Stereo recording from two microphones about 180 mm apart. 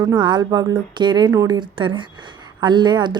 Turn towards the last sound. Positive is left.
turn(degrees=-25)  # may be behind; listen again after turning